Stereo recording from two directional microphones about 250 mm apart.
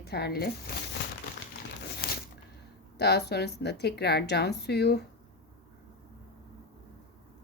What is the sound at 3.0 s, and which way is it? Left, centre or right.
Speech, left.